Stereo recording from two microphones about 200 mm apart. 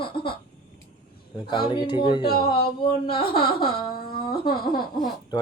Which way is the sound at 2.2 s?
50° left (ahead or behind).